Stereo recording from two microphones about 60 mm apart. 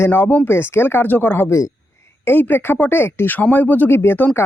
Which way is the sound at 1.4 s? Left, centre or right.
Left.